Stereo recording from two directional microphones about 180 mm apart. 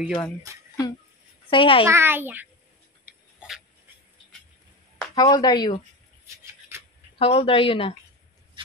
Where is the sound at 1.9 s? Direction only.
15° right (ahead or behind).